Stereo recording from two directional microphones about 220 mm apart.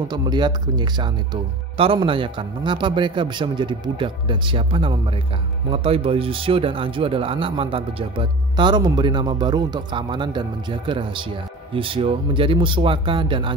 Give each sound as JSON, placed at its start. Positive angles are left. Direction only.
{"t": 0.1, "sound": "speech", "side_deg": -20}